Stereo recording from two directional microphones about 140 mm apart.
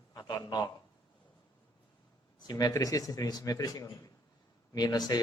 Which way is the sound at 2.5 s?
25° left (ahead or behind).